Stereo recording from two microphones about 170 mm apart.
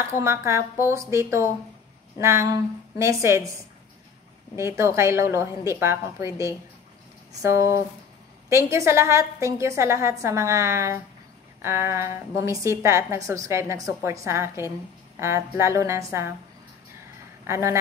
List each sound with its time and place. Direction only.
0.0 s a woman's voice: 15° right (ahead or behind)
4.6 s a woman's voice: 15° right (ahead or behind)
17.5 s a woman's voice: 15° right (ahead or behind)